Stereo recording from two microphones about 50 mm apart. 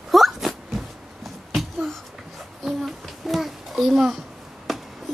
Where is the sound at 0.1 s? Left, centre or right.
Centre.